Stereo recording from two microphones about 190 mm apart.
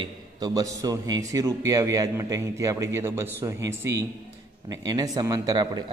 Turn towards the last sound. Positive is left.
turn(degrees=-20)  # may be behind; listen again after turning